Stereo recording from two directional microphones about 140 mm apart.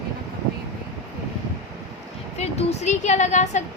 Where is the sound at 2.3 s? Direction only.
50° left (ahead or behind).